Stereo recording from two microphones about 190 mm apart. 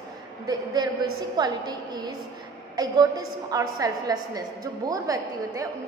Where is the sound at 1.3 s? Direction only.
20° right (ahead or behind).